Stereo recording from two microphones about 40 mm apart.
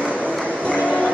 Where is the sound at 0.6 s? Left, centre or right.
Left.